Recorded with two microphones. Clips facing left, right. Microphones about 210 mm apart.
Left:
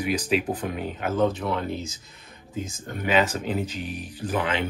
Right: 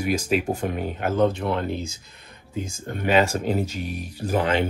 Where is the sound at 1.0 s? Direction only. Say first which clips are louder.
Right 2 dB; 5° left (ahead or behind).